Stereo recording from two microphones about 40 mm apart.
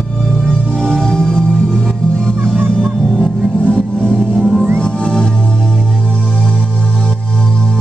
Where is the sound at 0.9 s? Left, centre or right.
Centre.